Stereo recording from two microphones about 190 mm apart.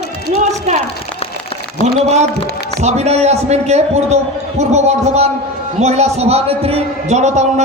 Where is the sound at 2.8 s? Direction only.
35° right (ahead or behind).